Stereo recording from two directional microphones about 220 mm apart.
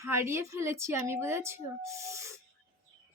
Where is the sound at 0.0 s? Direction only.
10° right (ahead or behind).